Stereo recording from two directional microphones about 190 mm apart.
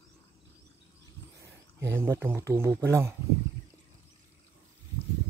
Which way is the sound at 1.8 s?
10° right (ahead or behind).